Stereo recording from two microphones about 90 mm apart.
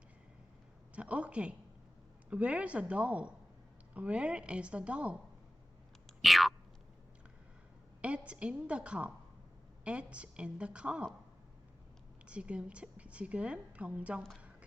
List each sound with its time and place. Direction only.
0.9 s a woman's voice: 15° right (ahead or behind)
6.1 s boing: centre (ahead or behind)
8.0 s a woman's voice: 15° right (ahead or behind)
12.2 s a woman's voice: 15° right (ahead or behind)